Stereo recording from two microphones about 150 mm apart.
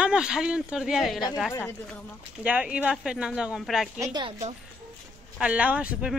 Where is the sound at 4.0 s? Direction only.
30° right (ahead or behind).